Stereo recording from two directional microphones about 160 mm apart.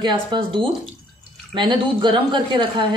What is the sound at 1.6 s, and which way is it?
A woman's voice, 30° right (ahead or behind).